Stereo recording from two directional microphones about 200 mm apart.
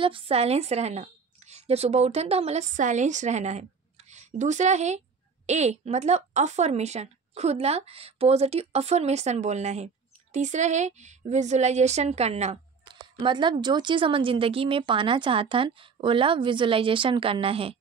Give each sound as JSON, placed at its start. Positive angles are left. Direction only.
{"t": 0.0, "sound": "a woman's voice", "side_deg": -25}
{"t": 12.8, "sound": "speech", "side_deg": -25}